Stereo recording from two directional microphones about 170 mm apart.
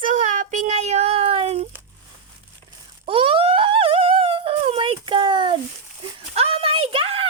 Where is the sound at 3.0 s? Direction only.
35° right (ahead or behind).